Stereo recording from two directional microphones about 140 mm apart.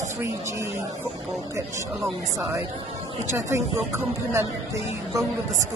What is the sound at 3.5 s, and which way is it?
Speech, 20° right (ahead or behind).